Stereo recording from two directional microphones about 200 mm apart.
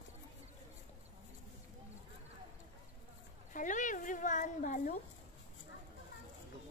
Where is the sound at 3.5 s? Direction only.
40° left (ahead or behind).